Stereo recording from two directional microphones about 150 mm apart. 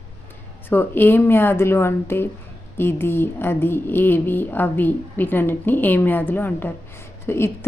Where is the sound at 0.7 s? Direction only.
15° left (ahead or behind).